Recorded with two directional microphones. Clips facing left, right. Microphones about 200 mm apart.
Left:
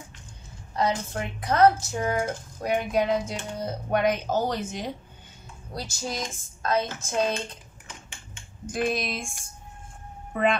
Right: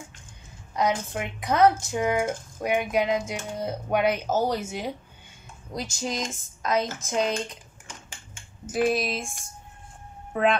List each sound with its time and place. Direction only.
0.7 s speech: 15° right (ahead or behind)
5.8 s speech: 20° right (ahead or behind)
8.6 s a woman's voice: 5° right (ahead or behind)